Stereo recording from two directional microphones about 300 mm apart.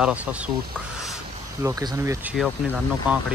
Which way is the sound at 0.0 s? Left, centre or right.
Centre.